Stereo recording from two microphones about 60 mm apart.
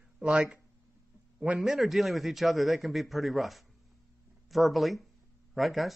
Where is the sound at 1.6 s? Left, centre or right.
Centre.